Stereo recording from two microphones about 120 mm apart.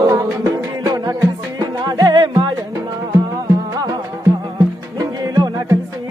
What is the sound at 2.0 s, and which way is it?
Music, 35° right (ahead or behind).